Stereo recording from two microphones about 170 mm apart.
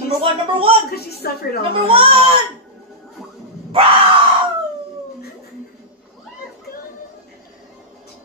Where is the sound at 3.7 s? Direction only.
30° right (ahead or behind).